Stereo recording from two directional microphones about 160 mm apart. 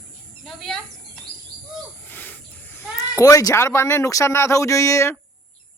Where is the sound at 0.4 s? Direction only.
Centre (ahead or behind).